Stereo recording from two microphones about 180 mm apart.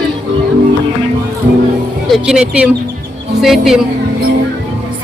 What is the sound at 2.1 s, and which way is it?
Music, centre (ahead or behind).